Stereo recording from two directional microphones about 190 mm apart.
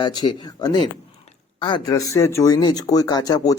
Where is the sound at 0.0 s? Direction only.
20° left (ahead or behind).